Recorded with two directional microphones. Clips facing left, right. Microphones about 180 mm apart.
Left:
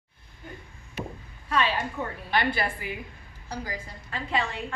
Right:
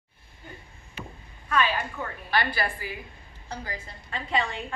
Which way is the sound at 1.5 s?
25° left (ahead or behind).